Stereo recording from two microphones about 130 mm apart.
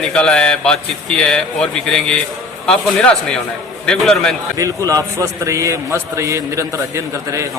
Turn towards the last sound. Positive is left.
turn(degrees=-25)  # may be behind; listen again after turning